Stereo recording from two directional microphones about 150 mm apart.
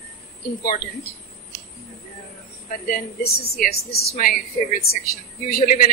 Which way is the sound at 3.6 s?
90° left.